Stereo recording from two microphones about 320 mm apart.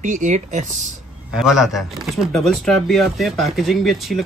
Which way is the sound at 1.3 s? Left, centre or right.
Centre.